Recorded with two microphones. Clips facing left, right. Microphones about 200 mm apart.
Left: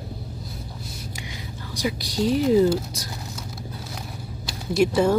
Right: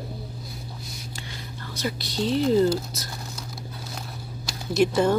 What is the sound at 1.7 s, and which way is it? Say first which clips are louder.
Speech: left 3 dB; 10° left (ahead or behind).